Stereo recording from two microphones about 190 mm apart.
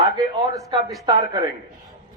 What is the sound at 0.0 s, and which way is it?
A man's voice, 20° right (ahead or behind).